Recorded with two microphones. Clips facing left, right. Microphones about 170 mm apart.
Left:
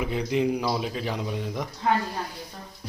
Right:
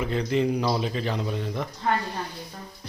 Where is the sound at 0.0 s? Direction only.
10° left (ahead or behind).